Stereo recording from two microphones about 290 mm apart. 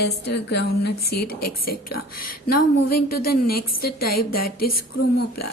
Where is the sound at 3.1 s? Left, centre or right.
Left.